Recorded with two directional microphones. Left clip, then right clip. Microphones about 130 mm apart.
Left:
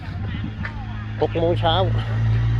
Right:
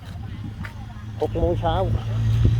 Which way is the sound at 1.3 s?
15° right (ahead or behind).